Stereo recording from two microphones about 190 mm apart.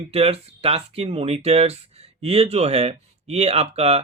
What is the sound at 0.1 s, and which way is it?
Speech, 30° right (ahead or behind).